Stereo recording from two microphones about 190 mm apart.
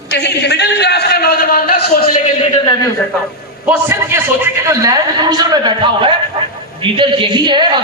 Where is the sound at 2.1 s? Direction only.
40° left (ahead or behind).